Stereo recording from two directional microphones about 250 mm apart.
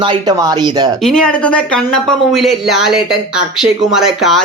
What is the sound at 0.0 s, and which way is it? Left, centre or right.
Speech, centre.